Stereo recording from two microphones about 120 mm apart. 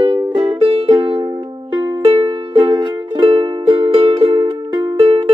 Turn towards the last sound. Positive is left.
turn(degrees=-50)  # may be behind; listen again after turning